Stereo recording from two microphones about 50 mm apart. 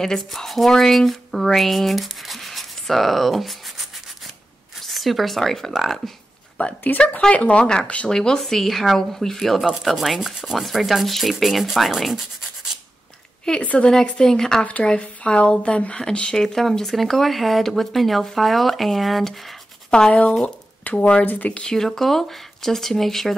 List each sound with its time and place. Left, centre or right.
0.0 s speech: centre
4.8 s speech: centre
6.6 s speech: left
7.0 s a woman's voice: left
8.1 s speech: centre
13.5 s a woman's voice: left
14.2 s speech: centre
14.6 s a woman's voice: left
16.3 s speech: centre
19.9 s speech: centre
21.6 s speech: centre